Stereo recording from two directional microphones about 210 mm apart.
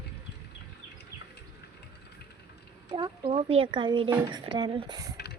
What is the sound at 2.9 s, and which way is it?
Speech, 25° right (ahead or behind).